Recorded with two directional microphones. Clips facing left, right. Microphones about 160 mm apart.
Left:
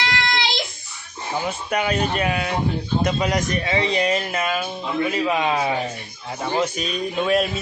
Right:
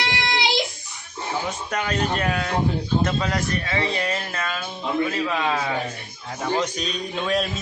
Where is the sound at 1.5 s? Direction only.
10° left (ahead or behind).